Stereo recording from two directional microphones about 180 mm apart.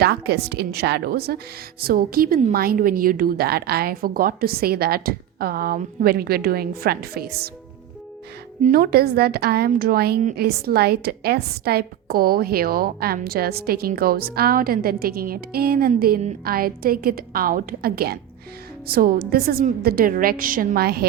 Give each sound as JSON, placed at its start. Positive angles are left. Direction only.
{"t": 0.0, "sound": "a woman's voice", "side_deg": -65}
{"t": 8.6, "sound": "a woman's voice", "side_deg": -55}